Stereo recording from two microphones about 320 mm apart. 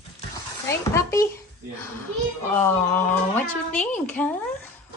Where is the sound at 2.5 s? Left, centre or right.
Centre.